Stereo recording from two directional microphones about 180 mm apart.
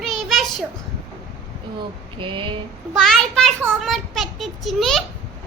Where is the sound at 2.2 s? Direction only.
30° right (ahead or behind).